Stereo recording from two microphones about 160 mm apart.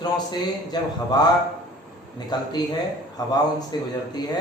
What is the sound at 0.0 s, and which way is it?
A man's voice, 25° left (ahead or behind).